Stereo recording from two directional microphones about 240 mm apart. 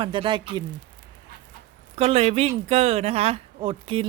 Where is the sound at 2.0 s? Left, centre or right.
Right.